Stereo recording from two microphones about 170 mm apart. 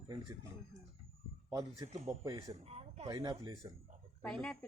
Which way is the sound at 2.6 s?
35° right (ahead or behind).